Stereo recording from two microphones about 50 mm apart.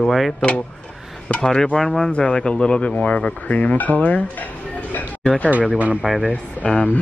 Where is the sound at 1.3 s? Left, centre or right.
Centre; by 4.5 s left.